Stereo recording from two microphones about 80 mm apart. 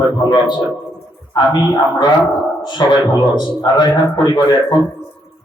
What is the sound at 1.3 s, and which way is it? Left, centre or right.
A man's voice, left.